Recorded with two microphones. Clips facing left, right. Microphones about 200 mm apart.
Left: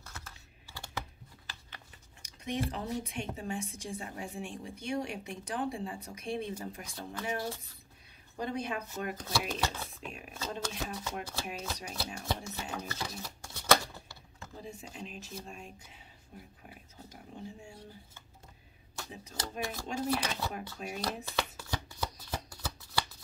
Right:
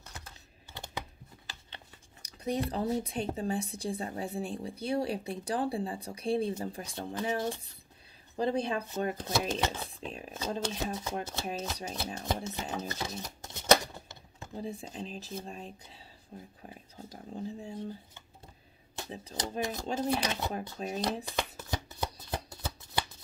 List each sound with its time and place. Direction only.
0.0 s computer keyboard: 20° right (ahead or behind)
2.2 s a woman's voice: 35° right (ahead or behind)
7.2 s a woman's voice: 20° right (ahead or behind)
12.4 s shuffling cards: 25° right (ahead or behind)
14.5 s a woman's voice: 35° right (ahead or behind)
18.9 s speech: 30° right (ahead or behind)
19.6 s speech: 20° right (ahead or behind)
20.8 s a woman's voice: 30° right (ahead or behind)
21.3 s shuffling cards: 20° right (ahead or behind)